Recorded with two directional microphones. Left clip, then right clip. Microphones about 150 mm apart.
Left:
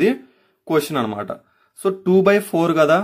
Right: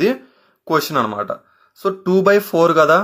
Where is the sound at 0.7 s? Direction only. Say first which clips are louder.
Right 3 dB; 15° left (ahead or behind).